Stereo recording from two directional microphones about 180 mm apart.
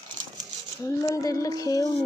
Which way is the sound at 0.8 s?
20° left (ahead or behind).